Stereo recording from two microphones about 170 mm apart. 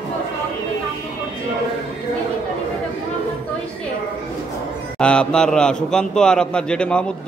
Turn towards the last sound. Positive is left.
turn(degrees=5)  # may be behind; listen again after turning